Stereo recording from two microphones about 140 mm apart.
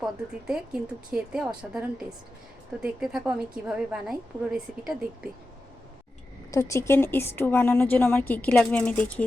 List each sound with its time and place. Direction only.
0.0 s speech: 5° right (ahead or behind)
6.5 s a woman's voice: 20° left (ahead or behind)